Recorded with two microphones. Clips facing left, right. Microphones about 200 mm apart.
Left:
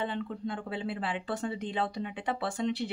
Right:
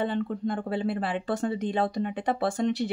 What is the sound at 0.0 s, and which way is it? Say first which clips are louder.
Speech: right 6 dB; 45° right (ahead or behind).